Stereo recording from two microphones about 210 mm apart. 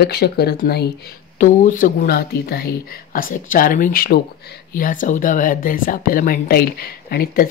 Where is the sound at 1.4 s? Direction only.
40° left (ahead or behind).